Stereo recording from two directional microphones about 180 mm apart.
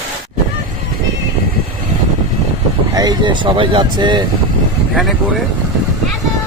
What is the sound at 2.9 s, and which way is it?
Speech, 20° right (ahead or behind).